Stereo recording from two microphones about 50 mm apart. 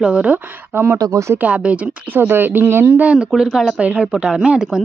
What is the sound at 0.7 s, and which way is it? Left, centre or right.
Speech, right.